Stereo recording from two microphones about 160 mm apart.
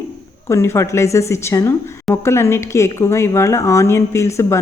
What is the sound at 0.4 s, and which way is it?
A woman's voice, 15° left (ahead or behind).